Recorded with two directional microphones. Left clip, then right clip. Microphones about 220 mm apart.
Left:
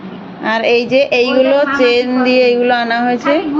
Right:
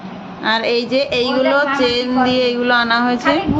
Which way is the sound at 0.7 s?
35° right (ahead or behind).